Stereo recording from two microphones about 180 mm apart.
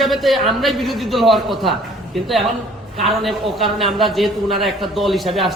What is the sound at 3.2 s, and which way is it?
A man's voice, centre (ahead or behind).